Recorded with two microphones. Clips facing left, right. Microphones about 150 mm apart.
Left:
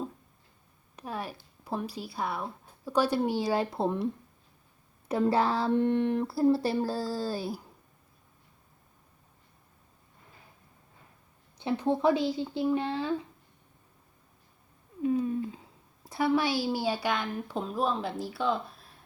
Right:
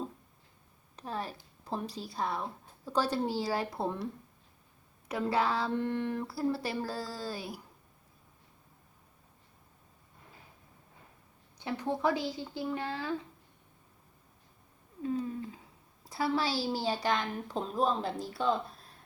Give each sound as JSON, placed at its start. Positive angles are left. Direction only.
{"t": 0.9, "sound": "a sound", "side_deg": 10}
{"t": 1.6, "sound": "a woman's voice", "side_deg": 10}
{"t": 5.7, "sound": "speech", "side_deg": 20}
{"t": 11.5, "sound": "speech", "side_deg": 20}
{"t": 15.0, "sound": "a sound", "side_deg": 15}
{"t": 16.0, "sound": "a woman's voice", "side_deg": 20}